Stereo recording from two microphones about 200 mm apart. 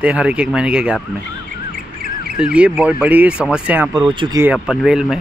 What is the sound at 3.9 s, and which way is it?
Speech, 25° right (ahead or behind).